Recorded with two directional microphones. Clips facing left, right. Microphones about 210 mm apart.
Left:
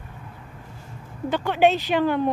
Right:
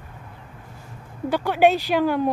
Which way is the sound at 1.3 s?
10° right (ahead or behind).